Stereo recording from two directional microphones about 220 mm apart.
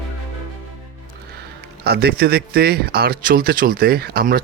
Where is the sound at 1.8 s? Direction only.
45° right (ahead or behind).